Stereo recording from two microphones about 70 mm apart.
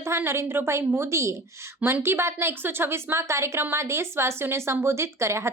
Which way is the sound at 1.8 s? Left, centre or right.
Right.